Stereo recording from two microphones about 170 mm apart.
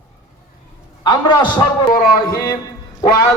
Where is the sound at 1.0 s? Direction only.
25° left (ahead or behind).